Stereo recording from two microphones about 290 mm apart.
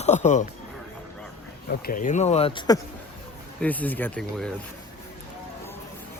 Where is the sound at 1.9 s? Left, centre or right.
Left; by 4.5 s centre.